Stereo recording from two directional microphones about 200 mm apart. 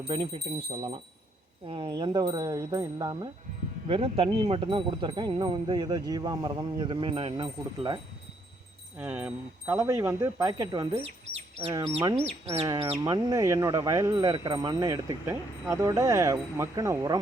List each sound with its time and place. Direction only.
0.1 s speech: 30° right (ahead or behind)
1.6 s speech: 25° right (ahead or behind)
9.0 s speech: 10° right (ahead or behind)
12.1 s speech: 30° right (ahead or behind)
12.6 s speech: 20° right (ahead or behind)